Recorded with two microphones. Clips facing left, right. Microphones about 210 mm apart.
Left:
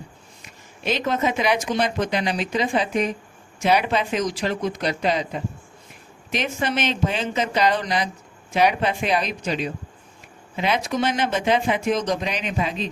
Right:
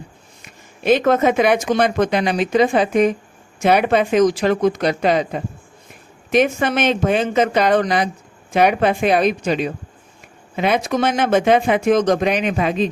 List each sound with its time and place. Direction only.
0.4 s speech: 50° right (ahead or behind)